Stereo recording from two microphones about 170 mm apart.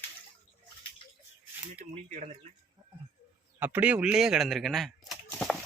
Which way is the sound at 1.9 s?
45° right (ahead or behind).